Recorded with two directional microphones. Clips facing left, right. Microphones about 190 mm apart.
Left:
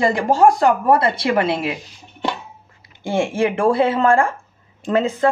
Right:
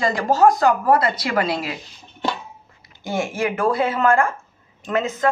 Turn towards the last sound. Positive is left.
turn(degrees=30)  # may be behind; listen again after turning